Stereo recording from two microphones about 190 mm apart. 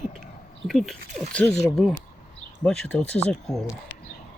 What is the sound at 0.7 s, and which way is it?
Speech, centre (ahead or behind).